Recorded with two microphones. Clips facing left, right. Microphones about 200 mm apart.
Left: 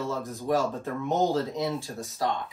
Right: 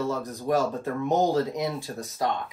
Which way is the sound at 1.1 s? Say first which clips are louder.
Right 2 dB; 15° right (ahead or behind).